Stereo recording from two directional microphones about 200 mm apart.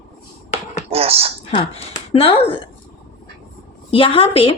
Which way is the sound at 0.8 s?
30° right (ahead or behind).